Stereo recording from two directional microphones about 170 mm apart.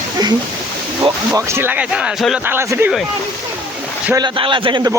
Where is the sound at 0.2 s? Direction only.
25° right (ahead or behind).